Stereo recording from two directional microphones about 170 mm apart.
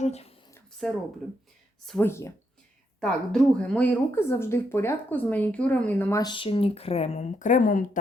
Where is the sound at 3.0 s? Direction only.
5° left (ahead or behind).